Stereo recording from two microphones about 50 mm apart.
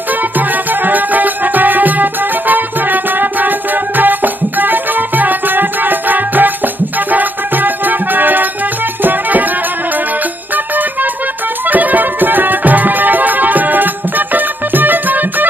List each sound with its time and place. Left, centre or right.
0.4 s music: right
10.5 s music: right